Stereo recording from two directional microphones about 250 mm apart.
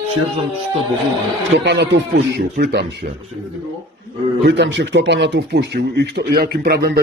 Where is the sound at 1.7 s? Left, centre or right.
Right.